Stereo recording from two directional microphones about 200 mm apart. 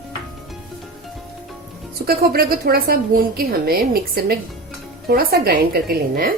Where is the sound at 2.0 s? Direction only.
50° right (ahead or behind).